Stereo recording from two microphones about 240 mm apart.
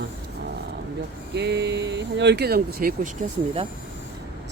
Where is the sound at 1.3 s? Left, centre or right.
Right.